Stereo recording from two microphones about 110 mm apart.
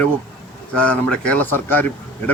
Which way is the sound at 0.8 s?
10° left (ahead or behind).